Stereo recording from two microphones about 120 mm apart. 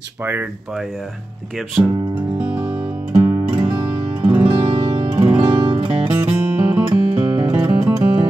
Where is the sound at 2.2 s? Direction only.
10° right (ahead or behind).